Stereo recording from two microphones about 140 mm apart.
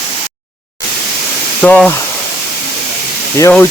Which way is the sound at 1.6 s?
10° left (ahead or behind).